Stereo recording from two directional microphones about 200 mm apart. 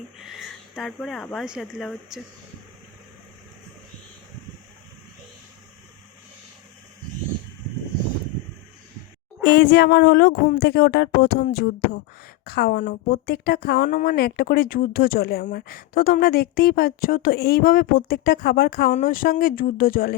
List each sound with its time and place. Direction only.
0.2 s speech: centre (ahead or behind)
9.4 s speech: 55° left (ahead or behind)